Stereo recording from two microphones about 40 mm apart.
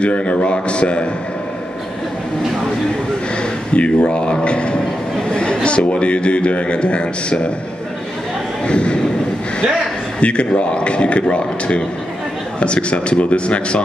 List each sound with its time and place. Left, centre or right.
0.0 s a man's voice: left
3.7 s a man's voice: left
8.6 s a man's voice: left
10.2 s a man's voice: left